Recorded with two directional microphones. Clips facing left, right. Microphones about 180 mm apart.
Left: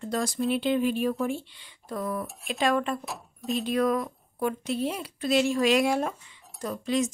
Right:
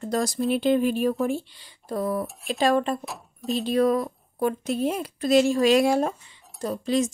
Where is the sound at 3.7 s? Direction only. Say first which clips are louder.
Right 4 dB; 30° right (ahead or behind).